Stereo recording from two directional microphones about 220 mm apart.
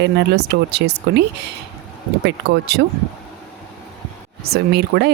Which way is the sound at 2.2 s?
50° right (ahead or behind).